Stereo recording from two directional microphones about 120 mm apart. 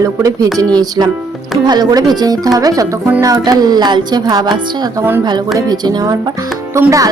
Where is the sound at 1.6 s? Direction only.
35° right (ahead or behind).